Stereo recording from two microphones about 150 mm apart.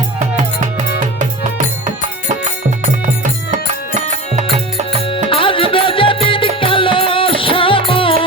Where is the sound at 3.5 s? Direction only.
55° right (ahead or behind).